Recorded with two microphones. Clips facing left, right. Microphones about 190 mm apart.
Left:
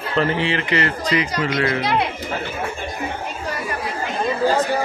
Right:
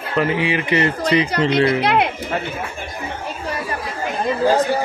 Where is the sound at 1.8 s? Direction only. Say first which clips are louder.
Right 3 dB; 60° right (ahead or behind).